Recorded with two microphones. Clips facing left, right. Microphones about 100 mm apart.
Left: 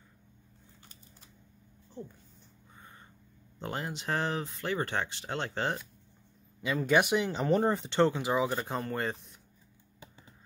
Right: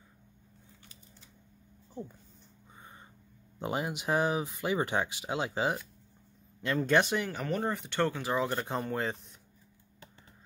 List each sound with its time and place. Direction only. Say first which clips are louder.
2.8 s a sound: right 1 dB; 20° right (ahead or behind)
3.5 s speech: right 3 dB; 15° right (ahead or behind)
6.6 s speech: even; 5° left (ahead or behind); by 7.5 s 20° left (ahead or behind)
7.5 s speech: left 5 dB; 30° left (ahead or behind); by 8.5 s 15° left (ahead or behind)
8.5 s speech: right 1 dB; centre (ahead or behind)